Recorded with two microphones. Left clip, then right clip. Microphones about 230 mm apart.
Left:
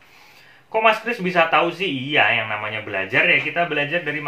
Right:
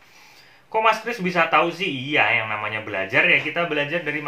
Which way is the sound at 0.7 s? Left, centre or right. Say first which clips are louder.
Left 2 dB; centre.